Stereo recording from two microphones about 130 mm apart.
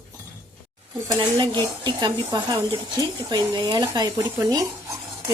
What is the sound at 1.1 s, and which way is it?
Speech, 35° right (ahead or behind).